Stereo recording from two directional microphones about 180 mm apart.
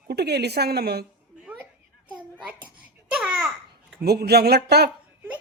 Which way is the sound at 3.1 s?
5° right (ahead or behind).